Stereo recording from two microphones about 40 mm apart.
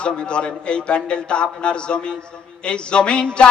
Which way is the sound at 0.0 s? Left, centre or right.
Left.